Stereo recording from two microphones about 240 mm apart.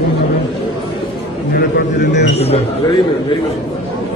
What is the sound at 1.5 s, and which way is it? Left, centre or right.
Speech, left.